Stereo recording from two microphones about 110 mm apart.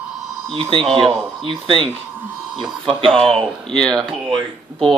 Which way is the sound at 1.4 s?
50° right (ahead or behind).